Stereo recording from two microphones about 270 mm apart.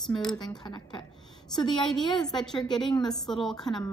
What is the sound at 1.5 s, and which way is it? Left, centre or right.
Speech, centre.